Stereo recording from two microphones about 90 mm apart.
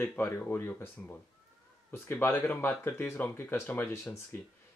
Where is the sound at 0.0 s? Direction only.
20° left (ahead or behind).